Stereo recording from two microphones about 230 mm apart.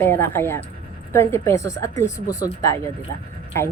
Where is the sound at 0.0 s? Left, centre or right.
Centre.